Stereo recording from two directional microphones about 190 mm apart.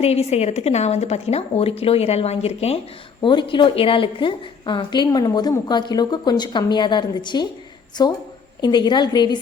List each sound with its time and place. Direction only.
0.0 s a woman's voice: 35° left (ahead or behind)